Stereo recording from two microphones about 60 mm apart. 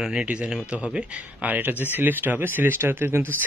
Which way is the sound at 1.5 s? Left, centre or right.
Right.